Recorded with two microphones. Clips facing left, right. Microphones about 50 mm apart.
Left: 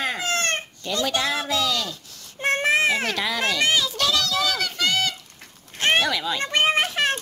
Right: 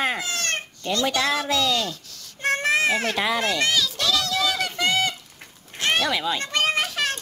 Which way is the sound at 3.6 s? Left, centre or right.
Left.